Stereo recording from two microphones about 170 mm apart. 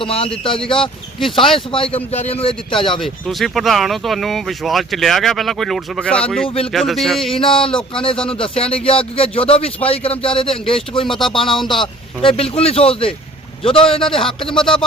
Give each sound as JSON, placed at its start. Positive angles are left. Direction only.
{"t": 0.0, "sound": "speech", "side_deg": 35}
{"t": 3.0, "sound": "speech", "side_deg": 0}
{"t": 7.3, "sound": "speech", "side_deg": 30}
{"t": 11.6, "sound": "speech", "side_deg": 0}
{"t": 12.2, "sound": "speech", "side_deg": 35}
{"t": 14.6, "sound": "speech", "side_deg": 5}